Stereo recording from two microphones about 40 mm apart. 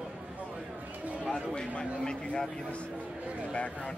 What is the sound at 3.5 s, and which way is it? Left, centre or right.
Speech, left.